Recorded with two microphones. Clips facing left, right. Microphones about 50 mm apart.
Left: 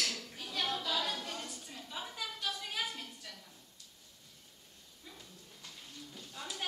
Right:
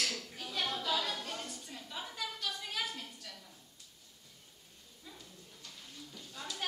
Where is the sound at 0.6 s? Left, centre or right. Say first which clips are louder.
Right 1 dB; centre.